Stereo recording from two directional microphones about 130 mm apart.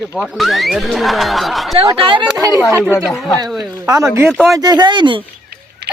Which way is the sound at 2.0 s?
40° right (ahead or behind).